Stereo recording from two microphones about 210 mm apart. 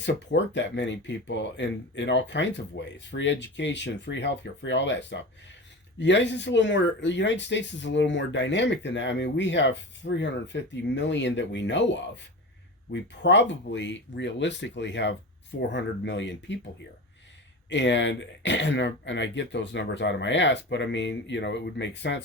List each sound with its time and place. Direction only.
0.0 s speech: 55° left (ahead or behind)
17.7 s speech: 60° left (ahead or behind)